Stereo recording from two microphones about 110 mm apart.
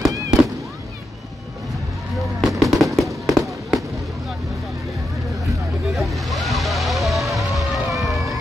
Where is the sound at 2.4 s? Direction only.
Centre (ahead or behind).